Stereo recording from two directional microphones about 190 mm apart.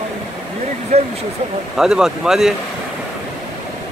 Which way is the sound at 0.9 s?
35° right (ahead or behind).